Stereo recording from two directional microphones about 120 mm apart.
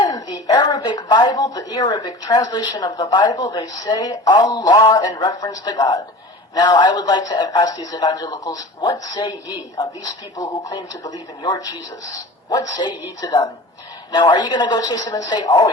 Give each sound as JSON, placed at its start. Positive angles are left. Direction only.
{"t": 0.0, "sound": "a woman's voice", "side_deg": 35}